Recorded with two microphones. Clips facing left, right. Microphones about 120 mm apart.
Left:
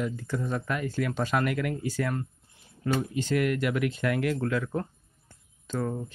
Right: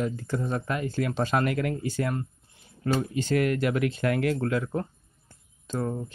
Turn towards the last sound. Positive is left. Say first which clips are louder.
# right 1 dB
turn(degrees=-20)  # may be behind; listen again after turning